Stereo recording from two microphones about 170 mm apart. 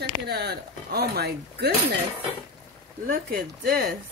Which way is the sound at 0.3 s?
70° right (ahead or behind).